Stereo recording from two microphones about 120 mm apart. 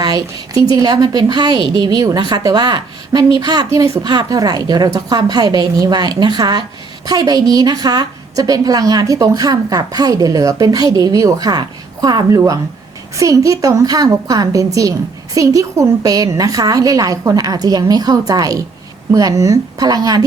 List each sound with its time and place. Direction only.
0.0 s a woman's voice: 30° right (ahead or behind)